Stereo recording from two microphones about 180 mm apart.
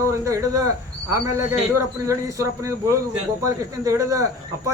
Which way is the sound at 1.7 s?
15° right (ahead or behind).